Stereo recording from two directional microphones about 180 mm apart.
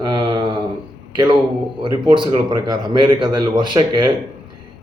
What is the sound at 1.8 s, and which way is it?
Speech, 25° right (ahead or behind).